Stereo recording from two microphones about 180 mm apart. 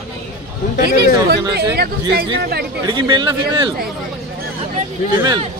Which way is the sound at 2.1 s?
65° right (ahead or behind).